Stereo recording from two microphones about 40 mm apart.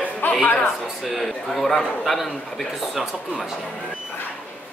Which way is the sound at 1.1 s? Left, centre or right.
Centre.